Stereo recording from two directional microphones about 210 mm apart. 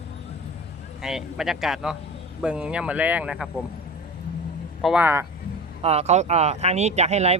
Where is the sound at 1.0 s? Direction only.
Centre (ahead or behind).